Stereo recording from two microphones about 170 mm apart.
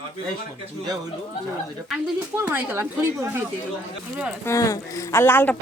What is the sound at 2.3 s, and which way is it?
Speech, 10° right (ahead or behind).